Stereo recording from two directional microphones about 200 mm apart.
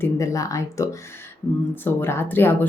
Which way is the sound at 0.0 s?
15° left (ahead or behind).